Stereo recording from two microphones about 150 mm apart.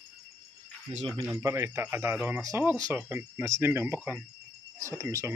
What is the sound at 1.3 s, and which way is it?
Speech, 20° right (ahead or behind).